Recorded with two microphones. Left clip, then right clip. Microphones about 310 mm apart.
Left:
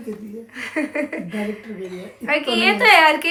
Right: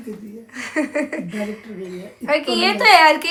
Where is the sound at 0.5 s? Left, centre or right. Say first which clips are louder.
Right 2 dB; centre.